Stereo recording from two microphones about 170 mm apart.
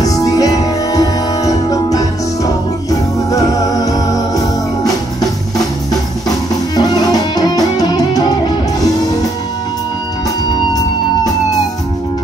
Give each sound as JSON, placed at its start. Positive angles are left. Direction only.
{"t": 0.0, "sound": "music", "side_deg": 20}